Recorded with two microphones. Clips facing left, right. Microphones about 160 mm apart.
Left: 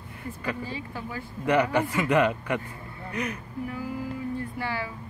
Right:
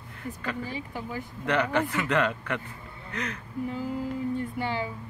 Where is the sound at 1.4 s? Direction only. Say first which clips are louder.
Left 3 dB; 10° left (ahead or behind).